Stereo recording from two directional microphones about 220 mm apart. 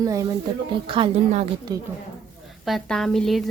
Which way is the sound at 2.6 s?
Centre (ahead or behind).